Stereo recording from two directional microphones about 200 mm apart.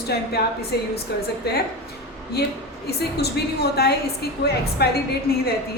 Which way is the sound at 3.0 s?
55° left (ahead or behind).